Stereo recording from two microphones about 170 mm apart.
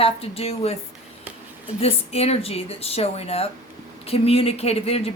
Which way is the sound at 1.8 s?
35° left (ahead or behind).